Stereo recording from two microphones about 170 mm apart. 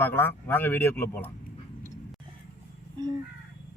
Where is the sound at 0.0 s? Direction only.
15° left (ahead or behind).